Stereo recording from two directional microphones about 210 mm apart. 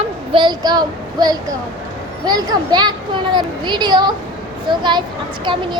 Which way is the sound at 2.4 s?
20° right (ahead or behind).